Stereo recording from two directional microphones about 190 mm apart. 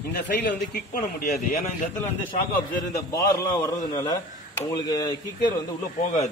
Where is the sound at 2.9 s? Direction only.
15° left (ahead or behind).